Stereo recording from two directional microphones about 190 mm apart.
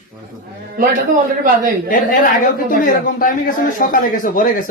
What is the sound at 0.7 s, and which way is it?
A man's voice, 45° right (ahead or behind).